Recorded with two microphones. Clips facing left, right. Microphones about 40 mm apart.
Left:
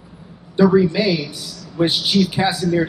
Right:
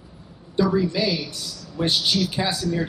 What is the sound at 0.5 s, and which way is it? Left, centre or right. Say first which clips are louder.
A man's voice: left 7 dB; left.